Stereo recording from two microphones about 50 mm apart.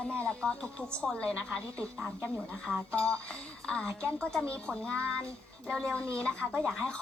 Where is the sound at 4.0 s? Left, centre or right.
Left.